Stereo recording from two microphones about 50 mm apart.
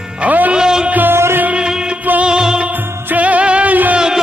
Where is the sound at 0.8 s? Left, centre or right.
Right.